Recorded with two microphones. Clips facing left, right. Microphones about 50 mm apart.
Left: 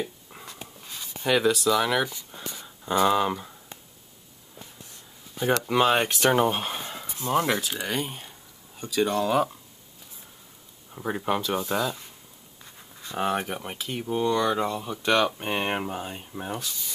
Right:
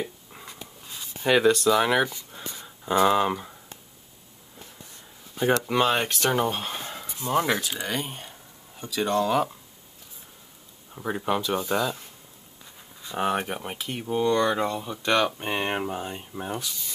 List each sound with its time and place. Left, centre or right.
0.9 s a sound: centre
1.7 s speech: centre
2.0 s speech: centre
5.6 s speech: centre
7.8 s a sound: centre
9.0 s speech: centre
10.9 s speech: centre
13.0 s speech: centre